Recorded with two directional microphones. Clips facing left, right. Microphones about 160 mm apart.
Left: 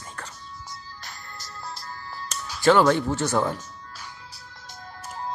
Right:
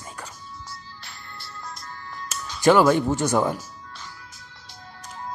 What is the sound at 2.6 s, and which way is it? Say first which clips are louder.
Speech: right 2 dB; 10° right (ahead or behind).